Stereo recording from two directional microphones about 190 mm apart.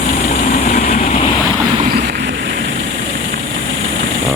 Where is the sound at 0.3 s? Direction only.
40° left (ahead or behind).